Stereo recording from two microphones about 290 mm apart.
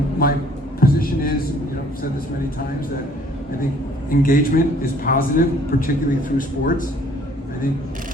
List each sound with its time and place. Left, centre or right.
0.2 s a man's voice: left
0.8 s a sound: left
4.1 s a man's voice: left